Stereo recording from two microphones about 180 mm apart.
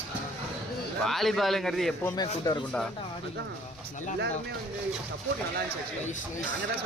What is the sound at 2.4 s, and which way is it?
Speech, 20° left (ahead or behind).